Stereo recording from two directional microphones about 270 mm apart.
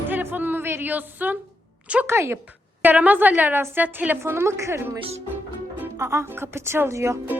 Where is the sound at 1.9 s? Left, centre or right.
Centre.